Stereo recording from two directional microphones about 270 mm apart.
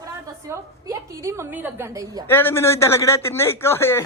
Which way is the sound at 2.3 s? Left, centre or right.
Centre.